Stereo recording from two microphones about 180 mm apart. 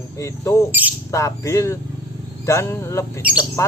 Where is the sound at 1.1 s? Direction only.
15° left (ahead or behind).